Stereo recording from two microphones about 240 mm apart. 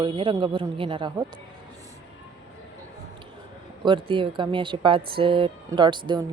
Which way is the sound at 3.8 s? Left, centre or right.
Right.